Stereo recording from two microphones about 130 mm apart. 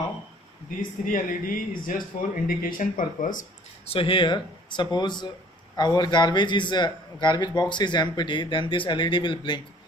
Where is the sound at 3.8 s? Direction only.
45° left (ahead or behind).